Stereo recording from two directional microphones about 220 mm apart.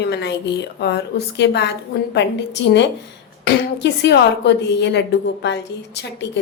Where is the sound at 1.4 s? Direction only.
50° left (ahead or behind).